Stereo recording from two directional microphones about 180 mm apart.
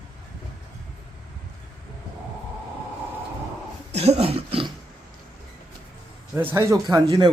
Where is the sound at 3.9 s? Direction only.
35° right (ahead or behind).